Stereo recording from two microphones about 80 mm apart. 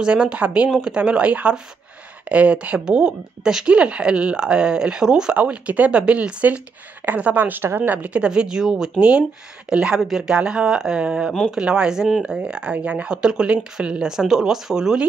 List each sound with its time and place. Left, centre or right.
0.0 s speech: centre